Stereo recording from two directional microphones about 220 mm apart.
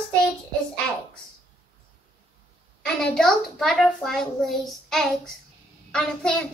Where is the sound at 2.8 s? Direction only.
5° left (ahead or behind).